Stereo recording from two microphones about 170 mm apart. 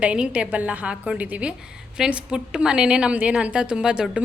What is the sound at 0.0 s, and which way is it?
A woman's voice, 5° right (ahead or behind).